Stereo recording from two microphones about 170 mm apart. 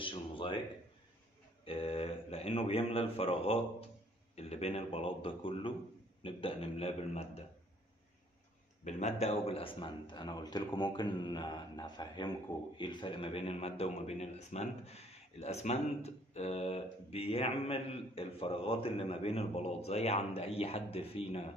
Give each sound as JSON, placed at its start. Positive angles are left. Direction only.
{"t": 0.0, "sound": "a sound", "side_deg": 30}
{"t": 1.6, "sound": "a man's voice", "side_deg": 35}
{"t": 8.8, "sound": "a man's voice", "side_deg": 40}